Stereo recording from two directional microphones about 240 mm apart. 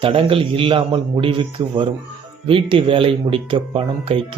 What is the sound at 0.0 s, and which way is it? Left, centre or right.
Speech, right.